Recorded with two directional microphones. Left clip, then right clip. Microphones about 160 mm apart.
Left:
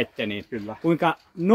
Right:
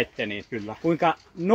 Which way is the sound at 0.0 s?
60° left (ahead or behind).